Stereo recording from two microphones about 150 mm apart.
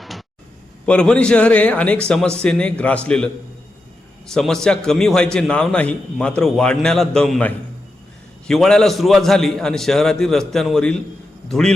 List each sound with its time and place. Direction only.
0.9 s a man's voice: 5° left (ahead or behind)
4.3 s a man's voice: 5° left (ahead or behind)